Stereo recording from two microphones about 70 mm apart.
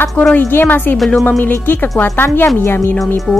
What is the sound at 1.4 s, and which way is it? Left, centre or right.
A woman's voice, left.